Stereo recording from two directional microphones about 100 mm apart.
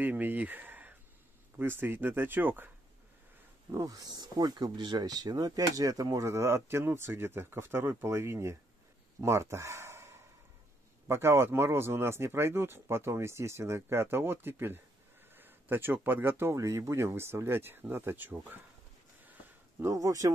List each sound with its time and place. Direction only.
0.0 s speech: 20° right (ahead or behind)
3.7 s speech: 35° right (ahead or behind); by 18.6 s 20° right (ahead or behind)
19.8 s speech: 30° right (ahead or behind)